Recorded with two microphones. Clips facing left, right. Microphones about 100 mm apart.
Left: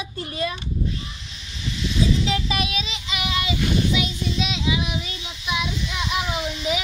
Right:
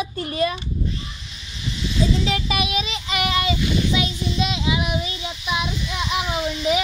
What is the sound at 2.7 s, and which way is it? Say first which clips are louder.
Child singing: right 4 dB; 55° right (ahead or behind).